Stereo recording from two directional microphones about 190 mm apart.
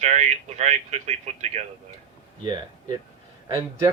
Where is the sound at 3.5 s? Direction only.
15° right (ahead or behind).